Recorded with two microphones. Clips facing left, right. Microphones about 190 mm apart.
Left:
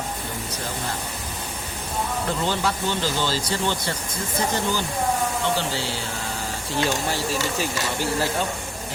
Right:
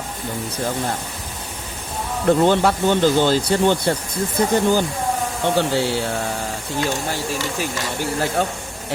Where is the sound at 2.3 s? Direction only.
55° right (ahead or behind).